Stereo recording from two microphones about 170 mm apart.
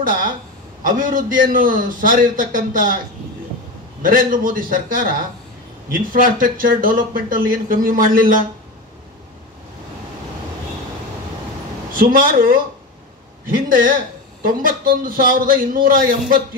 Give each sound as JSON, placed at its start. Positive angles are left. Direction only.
{"t": 0.0, "sound": "a man's voice", "side_deg": -55}
{"t": 4.0, "sound": "speech", "side_deg": -55}
{"t": 12.0, "sound": "speech", "side_deg": -55}
{"t": 13.7, "sound": "speech", "side_deg": -55}